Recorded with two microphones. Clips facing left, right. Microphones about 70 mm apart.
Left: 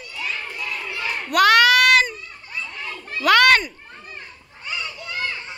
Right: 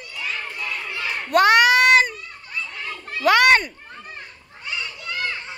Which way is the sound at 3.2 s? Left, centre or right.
Centre.